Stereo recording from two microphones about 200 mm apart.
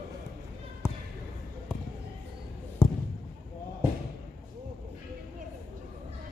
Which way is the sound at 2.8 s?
10° left (ahead or behind).